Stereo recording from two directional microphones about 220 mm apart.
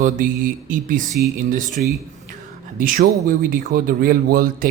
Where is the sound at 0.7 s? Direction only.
35° right (ahead or behind).